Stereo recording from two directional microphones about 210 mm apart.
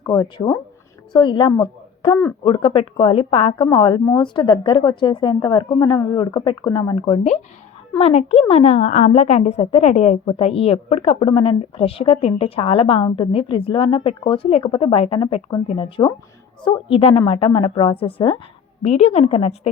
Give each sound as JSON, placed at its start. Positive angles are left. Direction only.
{"t": 0.0, "sound": "a woman's voice", "side_deg": 15}